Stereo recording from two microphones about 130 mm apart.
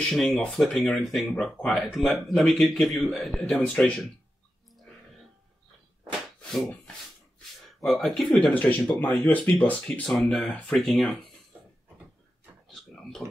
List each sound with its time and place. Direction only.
0.1 s speech: centre (ahead or behind)
7.6 s speech: centre (ahead or behind)
9.2 s speech: 20° left (ahead or behind)
9.6 s speech: 10° left (ahead or behind)
12.6 s a sound: centre (ahead or behind)